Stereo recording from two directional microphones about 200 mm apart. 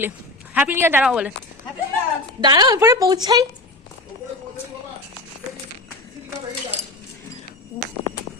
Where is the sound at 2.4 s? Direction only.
20° right (ahead or behind).